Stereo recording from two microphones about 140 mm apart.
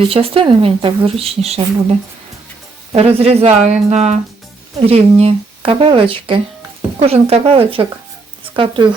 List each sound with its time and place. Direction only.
0.1 s speech: 40° right (ahead or behind)